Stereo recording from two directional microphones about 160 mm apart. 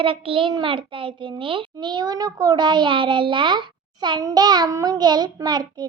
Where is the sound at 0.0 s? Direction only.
35° right (ahead or behind).